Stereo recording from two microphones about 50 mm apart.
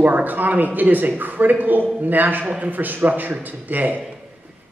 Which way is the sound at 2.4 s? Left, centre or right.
Right.